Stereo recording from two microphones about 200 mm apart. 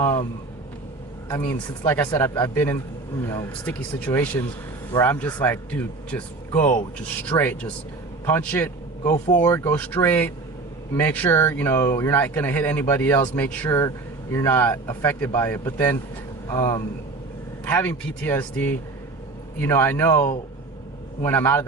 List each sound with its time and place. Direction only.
1.3 s speech: 10° left (ahead or behind)
21.2 s speech: 10° left (ahead or behind)